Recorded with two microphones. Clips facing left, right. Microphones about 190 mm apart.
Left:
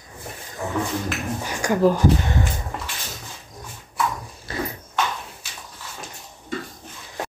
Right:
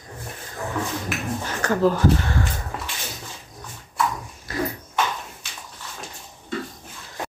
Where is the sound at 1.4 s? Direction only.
15° left (ahead or behind).